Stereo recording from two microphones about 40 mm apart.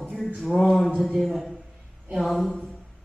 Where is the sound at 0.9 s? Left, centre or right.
Centre.